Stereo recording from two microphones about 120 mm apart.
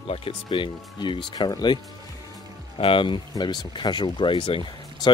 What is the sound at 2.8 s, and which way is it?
Speech, 45° left (ahead or behind).